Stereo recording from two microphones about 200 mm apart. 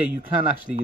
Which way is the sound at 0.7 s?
Centre (ahead or behind).